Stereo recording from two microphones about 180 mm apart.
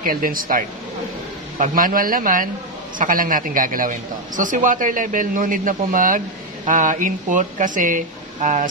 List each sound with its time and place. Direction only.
0.0 s a man's voice: 50° right (ahead or behind)